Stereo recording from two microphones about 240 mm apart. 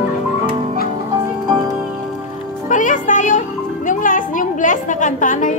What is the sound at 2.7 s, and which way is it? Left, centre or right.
Music, left.